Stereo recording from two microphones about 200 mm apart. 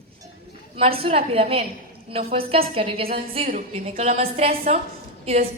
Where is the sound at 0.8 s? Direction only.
30° right (ahead or behind).